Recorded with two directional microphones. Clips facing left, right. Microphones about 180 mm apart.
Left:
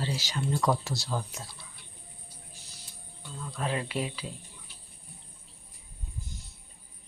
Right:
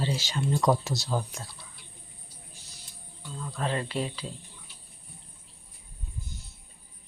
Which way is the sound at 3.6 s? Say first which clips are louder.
Right 1 dB; 5° left (ahead or behind).